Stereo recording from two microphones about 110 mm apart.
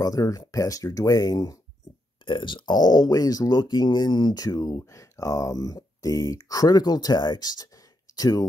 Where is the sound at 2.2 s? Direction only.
45° left (ahead or behind).